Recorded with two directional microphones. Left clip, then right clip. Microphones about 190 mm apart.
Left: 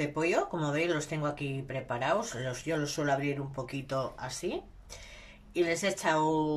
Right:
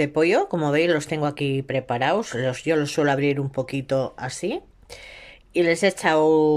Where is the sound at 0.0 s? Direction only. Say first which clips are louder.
Right 10 dB; 45° right (ahead or behind).